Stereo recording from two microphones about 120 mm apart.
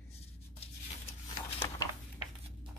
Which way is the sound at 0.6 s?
55° left (ahead or behind).